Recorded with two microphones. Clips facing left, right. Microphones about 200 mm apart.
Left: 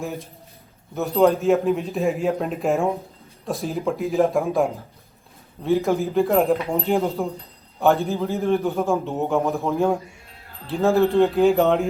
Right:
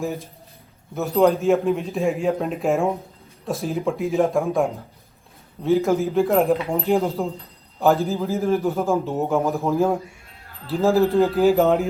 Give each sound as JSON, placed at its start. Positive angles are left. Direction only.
{"t": 0.0, "sound": "a man's voice", "side_deg": 0}